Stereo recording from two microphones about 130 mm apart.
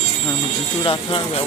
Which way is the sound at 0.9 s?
45° left (ahead or behind).